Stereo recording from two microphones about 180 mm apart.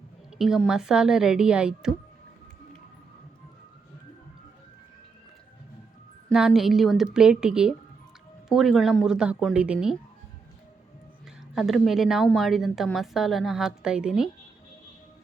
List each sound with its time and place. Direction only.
0.3 s a woman's voice: centre (ahead or behind)
6.2 s a woman's voice: centre (ahead or behind)
11.5 s a woman's voice: centre (ahead or behind)